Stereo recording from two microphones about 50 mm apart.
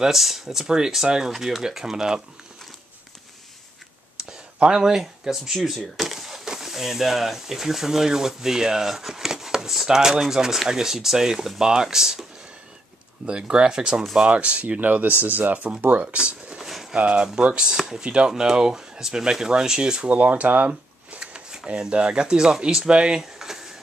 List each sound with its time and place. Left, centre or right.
0.0 s speech: centre
4.3 s speech: centre
14.1 s speech: right
16.5 s a sound: centre
16.9 s speech: right
21.2 s speech: centre
23.4 s a sound: centre